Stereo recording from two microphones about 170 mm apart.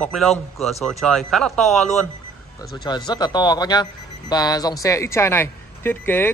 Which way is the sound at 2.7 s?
25° left (ahead or behind).